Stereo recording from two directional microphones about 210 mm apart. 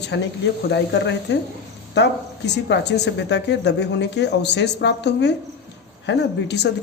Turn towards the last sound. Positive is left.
turn(degrees=55)  # may be behind; listen again after turning